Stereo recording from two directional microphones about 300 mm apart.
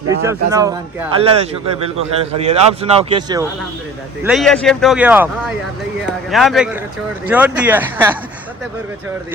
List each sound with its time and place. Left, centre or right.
0.3 s speech: centre
4.2 s speech: centre
6.3 s speech: centre